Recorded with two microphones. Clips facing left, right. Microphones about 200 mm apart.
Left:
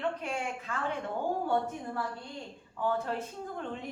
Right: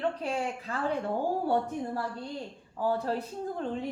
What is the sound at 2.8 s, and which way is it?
Speech, 35° right (ahead or behind).